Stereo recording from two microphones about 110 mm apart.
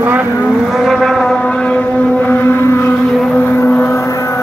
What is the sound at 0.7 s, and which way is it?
Vehicle, 5° right (ahead or behind).